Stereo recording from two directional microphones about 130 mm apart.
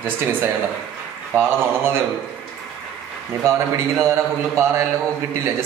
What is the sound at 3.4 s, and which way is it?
A man's voice, 20° right (ahead or behind).